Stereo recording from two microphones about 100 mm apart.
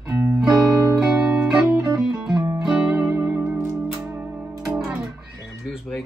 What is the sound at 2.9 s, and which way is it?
Music, 20° right (ahead or behind).